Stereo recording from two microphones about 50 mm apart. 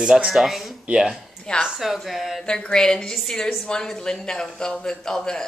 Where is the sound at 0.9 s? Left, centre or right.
Centre.